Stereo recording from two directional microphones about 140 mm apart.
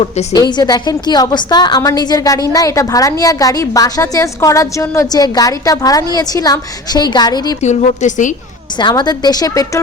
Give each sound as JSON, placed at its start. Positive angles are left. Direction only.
{"t": 0.0, "sound": "a woman's voice", "side_deg": 50}
{"t": 0.3, "sound": "a woman's voice", "side_deg": 30}
{"t": 7.6, "sound": "a woman's voice", "side_deg": 55}
{"t": 8.8, "sound": "a woman's voice", "side_deg": 30}